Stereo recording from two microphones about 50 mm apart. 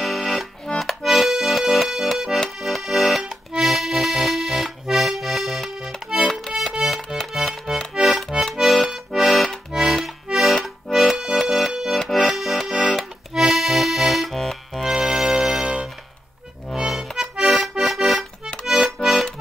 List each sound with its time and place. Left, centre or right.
0.0 s accordion: centre
6.5 s music: centre
7.9 s accordion: centre
9.7 s accordion: centre
10.6 s accordion: centre